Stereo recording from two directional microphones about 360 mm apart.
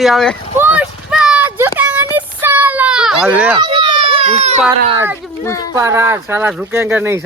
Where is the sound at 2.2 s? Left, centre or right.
Centre.